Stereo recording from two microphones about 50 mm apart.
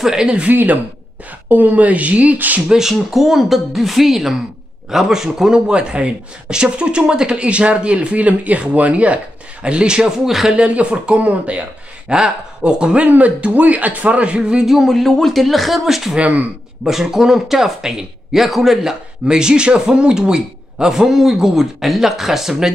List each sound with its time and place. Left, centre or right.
0.0 s speech: centre
0.5 s speech: right
2.7 s speech: centre
13.0 s speech: right
14.7 s speech: centre
16.2 s speech: right
16.8 s speech: centre